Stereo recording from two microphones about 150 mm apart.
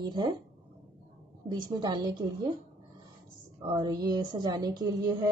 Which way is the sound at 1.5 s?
30° right (ahead or behind).